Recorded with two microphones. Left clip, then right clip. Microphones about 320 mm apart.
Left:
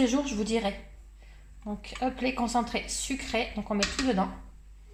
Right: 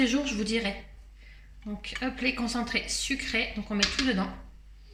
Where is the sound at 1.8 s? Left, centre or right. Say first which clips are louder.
Even; centre.